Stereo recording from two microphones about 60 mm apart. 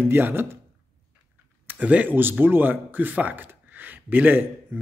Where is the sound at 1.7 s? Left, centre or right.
Right.